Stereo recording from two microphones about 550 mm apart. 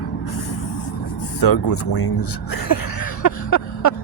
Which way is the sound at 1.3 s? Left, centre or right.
Left.